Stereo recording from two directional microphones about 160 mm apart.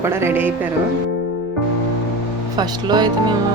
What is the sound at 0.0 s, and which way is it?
Speech, 15° right (ahead or behind).